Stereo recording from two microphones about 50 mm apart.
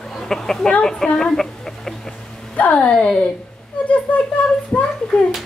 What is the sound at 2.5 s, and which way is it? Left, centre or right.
Speech, left.